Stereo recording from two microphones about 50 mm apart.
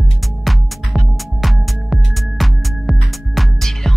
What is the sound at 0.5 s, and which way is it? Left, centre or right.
Music, centre.